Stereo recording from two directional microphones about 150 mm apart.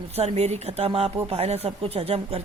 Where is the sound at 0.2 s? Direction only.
45° right (ahead or behind).